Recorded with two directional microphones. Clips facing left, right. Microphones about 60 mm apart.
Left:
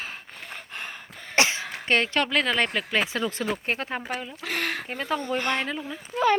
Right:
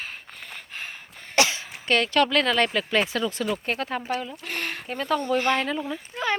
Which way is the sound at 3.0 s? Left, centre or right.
Left.